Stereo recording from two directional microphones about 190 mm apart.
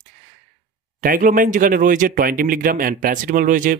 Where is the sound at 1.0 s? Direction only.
45° right (ahead or behind).